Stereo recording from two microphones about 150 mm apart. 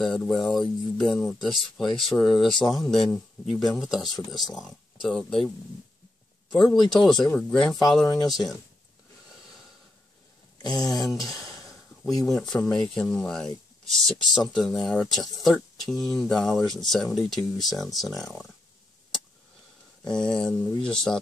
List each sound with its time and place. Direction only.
0.0 s speech: centre (ahead or behind)
6.5 s speech: centre (ahead or behind)
10.8 s a sound: 25° left (ahead or behind)
12.7 s speech: 5° left (ahead or behind)
20.1 s speech: 5° left (ahead or behind)